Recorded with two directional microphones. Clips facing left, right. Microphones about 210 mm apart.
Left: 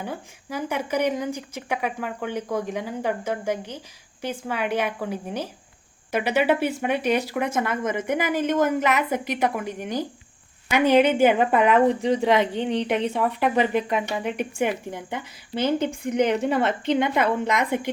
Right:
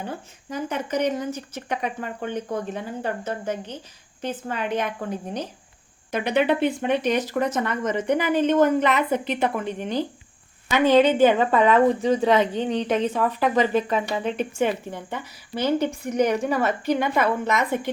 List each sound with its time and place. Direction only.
0.0 s a woman's voice: 10° left (ahead or behind)